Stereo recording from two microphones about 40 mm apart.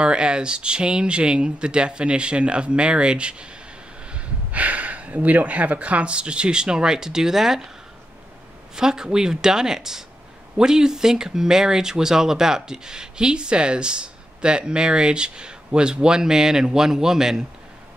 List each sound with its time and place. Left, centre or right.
0.0 s speech: right
4.1 s speech: right; by 7.7 s centre
8.7 s speech: centre